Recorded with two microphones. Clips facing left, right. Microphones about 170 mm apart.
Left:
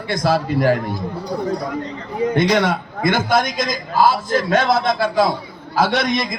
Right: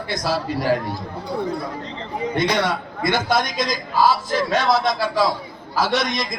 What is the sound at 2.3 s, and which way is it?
A man's voice, 55° left (ahead or behind).